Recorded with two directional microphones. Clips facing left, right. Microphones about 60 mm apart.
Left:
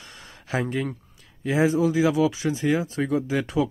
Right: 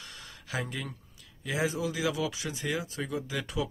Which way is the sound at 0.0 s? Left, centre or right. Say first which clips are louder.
Left 2 dB; left.